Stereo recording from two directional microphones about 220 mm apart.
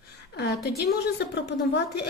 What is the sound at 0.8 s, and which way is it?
A woman's voice, 50° left (ahead or behind).